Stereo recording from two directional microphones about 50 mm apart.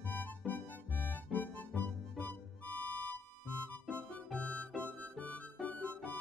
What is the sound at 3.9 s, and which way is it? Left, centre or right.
Music, left.